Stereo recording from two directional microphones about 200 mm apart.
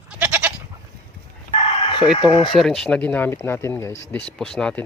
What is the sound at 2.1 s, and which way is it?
Speech, 25° left (ahead or behind).